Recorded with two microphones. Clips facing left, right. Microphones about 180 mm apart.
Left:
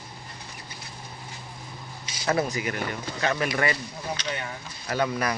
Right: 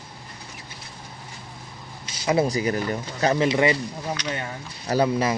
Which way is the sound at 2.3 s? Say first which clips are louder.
Right 7 dB; 35° right (ahead or behind).